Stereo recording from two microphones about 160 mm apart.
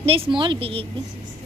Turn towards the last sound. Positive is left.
turn(degrees=-35)  # may be behind; listen again after turning